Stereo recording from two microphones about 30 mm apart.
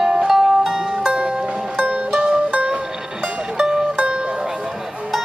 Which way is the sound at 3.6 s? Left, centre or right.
Right.